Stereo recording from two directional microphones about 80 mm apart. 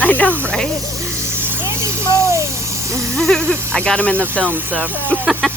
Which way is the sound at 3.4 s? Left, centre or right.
Right.